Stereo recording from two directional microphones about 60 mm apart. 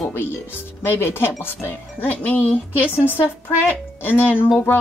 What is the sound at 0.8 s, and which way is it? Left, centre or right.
Speech, left.